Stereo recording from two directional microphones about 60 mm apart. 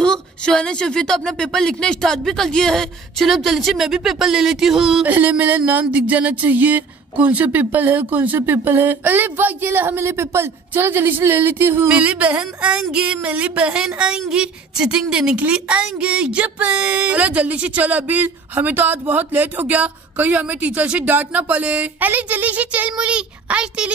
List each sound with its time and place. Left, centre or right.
0.0 s a woman's voice: centre
5.0 s speech: right
11.9 s speech: right